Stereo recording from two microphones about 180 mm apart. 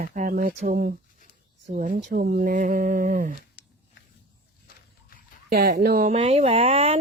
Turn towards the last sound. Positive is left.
turn(degrees=-35)  # may be behind; listen again after turning